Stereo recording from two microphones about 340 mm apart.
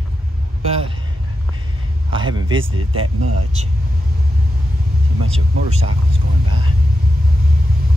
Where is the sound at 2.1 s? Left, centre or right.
Centre.